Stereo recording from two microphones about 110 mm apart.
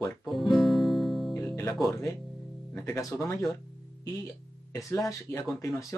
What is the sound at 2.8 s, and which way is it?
Speech, 25° left (ahead or behind).